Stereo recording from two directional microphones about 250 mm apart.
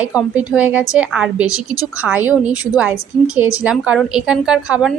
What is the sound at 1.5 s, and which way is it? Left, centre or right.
Speech, centre.